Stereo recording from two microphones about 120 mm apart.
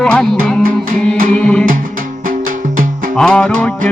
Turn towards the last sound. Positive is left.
turn(degrees=10)  # may be behind; listen again after turning